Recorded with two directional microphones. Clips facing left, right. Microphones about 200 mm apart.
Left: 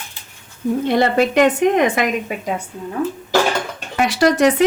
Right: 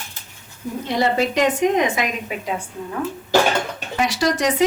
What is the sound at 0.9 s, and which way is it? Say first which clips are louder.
Speech: left 3 dB; 60° left (ahead or behind).